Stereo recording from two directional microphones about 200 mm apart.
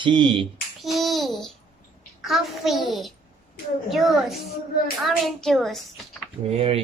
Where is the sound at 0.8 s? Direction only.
Centre (ahead or behind).